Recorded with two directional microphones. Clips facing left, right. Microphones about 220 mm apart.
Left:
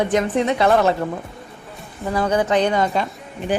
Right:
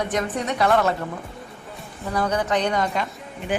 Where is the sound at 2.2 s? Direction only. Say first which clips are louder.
Left 4 dB; 25° left (ahead or behind).